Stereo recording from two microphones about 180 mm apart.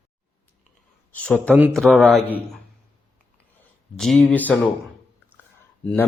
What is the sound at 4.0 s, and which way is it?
Speech, 5° left (ahead or behind).